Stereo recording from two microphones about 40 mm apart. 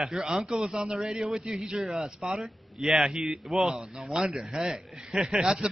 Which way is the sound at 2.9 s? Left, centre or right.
Centre.